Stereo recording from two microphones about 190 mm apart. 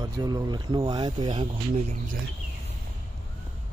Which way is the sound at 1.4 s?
40° right (ahead or behind).